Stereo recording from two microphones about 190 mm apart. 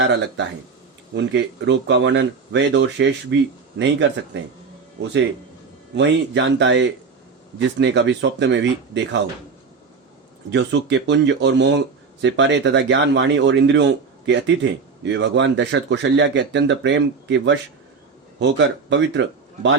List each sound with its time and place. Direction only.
0.0 s speech: 70° right (ahead or behind)
4.3 s speech: 70° right (ahead or behind)
6.0 s speech: 70° right (ahead or behind)
10.5 s speech: 70° right (ahead or behind)